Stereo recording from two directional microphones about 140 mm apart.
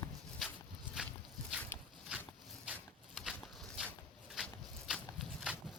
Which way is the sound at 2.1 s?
10° right (ahead or behind).